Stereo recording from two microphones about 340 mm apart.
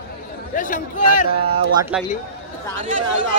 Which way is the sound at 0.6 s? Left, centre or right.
Left.